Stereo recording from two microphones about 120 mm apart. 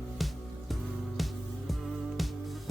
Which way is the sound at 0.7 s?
Centre (ahead or behind).